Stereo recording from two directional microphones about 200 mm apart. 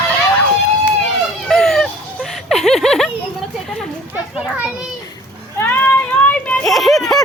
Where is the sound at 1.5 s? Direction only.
Centre (ahead or behind).